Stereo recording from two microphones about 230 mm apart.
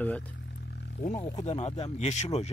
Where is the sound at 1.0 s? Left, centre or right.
Left.